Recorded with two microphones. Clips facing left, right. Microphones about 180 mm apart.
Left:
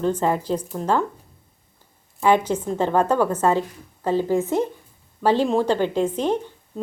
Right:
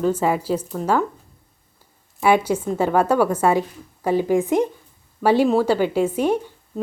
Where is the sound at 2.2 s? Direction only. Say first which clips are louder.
Right 1 dB; 10° right (ahead or behind).